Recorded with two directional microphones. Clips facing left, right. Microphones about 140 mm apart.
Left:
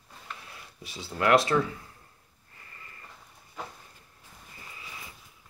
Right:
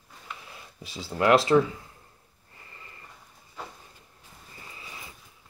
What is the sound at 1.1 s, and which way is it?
Speech, 25° right (ahead or behind).